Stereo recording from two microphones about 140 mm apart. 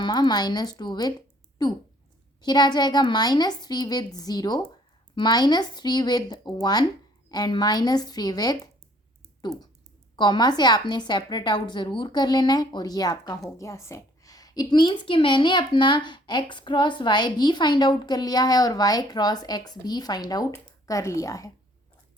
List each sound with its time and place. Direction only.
0.0 s a woman's voice: 30° left (ahead or behind)
10.2 s a woman's voice: 30° left (ahead or behind)